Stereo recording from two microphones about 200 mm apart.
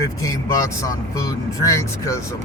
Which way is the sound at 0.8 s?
15° left (ahead or behind).